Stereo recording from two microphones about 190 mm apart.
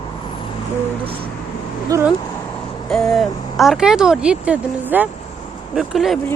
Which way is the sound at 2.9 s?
Centre (ahead or behind).